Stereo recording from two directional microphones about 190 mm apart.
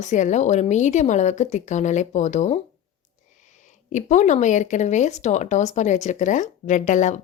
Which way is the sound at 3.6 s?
40° left (ahead or behind).